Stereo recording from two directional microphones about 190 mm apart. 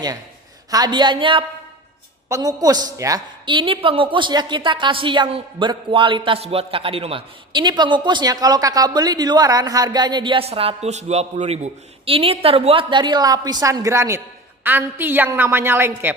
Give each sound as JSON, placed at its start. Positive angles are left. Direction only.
{"t": 0.7, "sound": "a woman's voice", "side_deg": -20}